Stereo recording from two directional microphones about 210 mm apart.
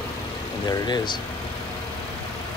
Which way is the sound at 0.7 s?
20° left (ahead or behind).